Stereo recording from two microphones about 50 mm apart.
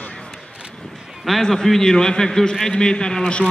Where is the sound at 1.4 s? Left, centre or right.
Centre.